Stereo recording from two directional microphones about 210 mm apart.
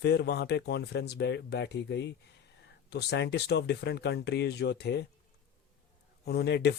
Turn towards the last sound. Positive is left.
turn(degrees=50)  # may be behind; listen again after turning